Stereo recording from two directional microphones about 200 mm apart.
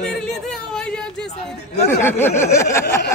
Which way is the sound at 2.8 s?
55° left (ahead or behind).